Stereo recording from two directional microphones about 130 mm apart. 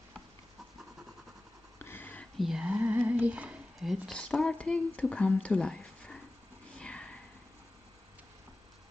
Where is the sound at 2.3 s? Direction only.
5° right (ahead or behind).